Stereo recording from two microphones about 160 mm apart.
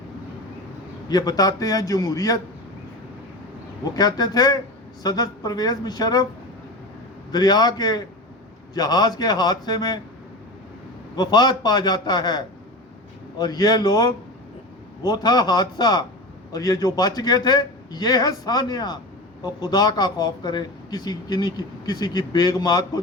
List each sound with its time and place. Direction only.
1.0 s a man's voice: 25° left (ahead or behind)
3.9 s a man's voice: 25° left (ahead or behind)
7.3 s a man's voice: 25° left (ahead or behind)
11.2 s a man's voice: 25° left (ahead or behind)
13.4 s a man's voice: 25° left (ahead or behind)